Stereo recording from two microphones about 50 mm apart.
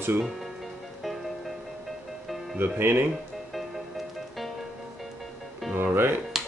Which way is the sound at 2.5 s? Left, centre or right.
Right.